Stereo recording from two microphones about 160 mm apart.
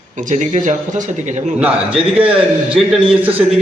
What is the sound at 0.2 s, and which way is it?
A man's voice, 50° right (ahead or behind).